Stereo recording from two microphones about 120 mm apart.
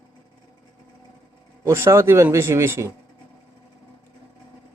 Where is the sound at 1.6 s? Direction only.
20° right (ahead or behind).